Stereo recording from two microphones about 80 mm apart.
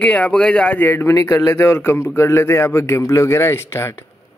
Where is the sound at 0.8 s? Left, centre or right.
Left.